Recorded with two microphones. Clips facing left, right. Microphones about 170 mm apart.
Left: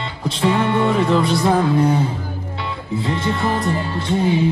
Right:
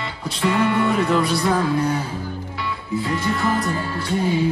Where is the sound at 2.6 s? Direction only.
25° left (ahead or behind).